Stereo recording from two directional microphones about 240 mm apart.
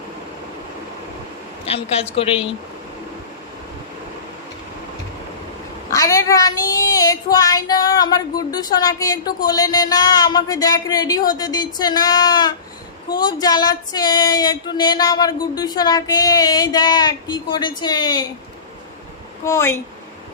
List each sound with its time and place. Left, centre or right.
1.6 s a woman's voice: left
5.9 s female singing: centre
19.5 s female singing: centre